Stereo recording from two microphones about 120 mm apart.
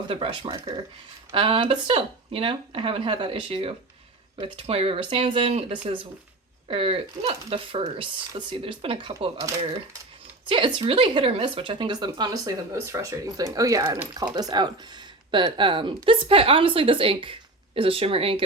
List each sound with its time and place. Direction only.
0.1 s speech: 50° right (ahead or behind)
10.5 s speech: 45° right (ahead or behind)